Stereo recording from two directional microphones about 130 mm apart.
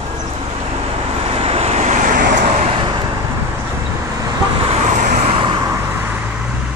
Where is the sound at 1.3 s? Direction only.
50° right (ahead or behind); by 2.7 s 70° right (ahead or behind).